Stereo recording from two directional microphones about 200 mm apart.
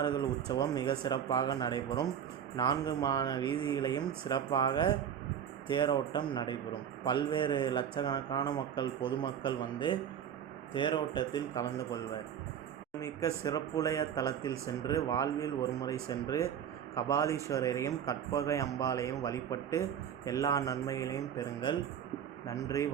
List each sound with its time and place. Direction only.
0.0 s speech: 20° left (ahead or behind)
13.0 s speech: 15° left (ahead or behind)